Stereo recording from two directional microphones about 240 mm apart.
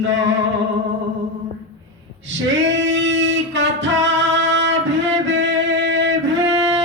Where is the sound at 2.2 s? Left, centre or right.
Right.